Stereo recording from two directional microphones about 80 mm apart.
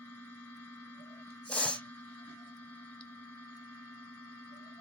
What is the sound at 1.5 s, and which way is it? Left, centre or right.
Spray, centre.